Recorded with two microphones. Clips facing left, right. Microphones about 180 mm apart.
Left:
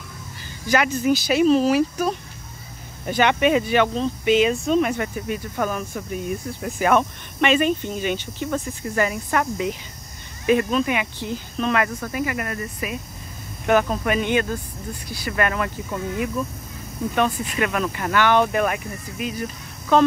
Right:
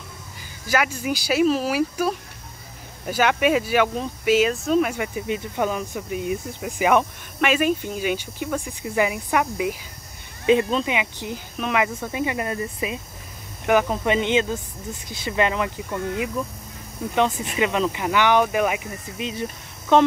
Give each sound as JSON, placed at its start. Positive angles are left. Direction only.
{"t": 0.7, "sound": "speech", "side_deg": -10}
{"t": 10.4, "sound": "speech", "side_deg": -20}
{"t": 17.1, "sound": "speech", "side_deg": -15}
{"t": 19.1, "sound": "speech", "side_deg": -25}